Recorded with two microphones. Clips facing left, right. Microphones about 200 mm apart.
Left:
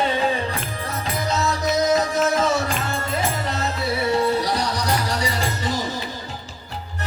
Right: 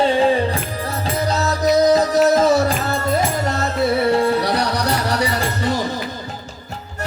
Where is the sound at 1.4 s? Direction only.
35° right (ahead or behind).